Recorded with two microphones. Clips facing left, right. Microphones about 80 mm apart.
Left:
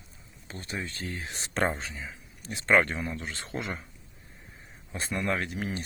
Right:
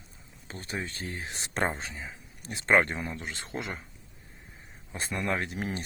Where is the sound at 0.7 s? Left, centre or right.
Right.